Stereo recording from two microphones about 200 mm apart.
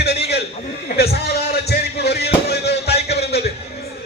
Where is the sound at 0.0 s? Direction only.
55° left (ahead or behind).